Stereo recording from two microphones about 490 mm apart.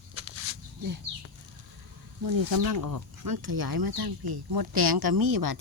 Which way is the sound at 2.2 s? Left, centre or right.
Right.